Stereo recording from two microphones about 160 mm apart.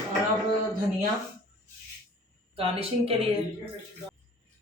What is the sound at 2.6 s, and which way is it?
Speech, 35° right (ahead or behind).